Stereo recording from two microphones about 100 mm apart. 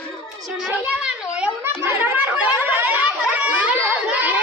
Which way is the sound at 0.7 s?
10° right (ahead or behind).